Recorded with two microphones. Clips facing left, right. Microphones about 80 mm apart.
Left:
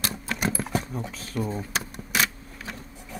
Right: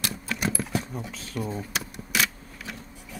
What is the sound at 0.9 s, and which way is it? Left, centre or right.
Speech, centre.